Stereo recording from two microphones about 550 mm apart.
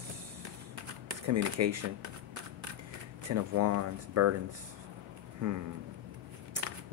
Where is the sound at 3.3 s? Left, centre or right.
Right.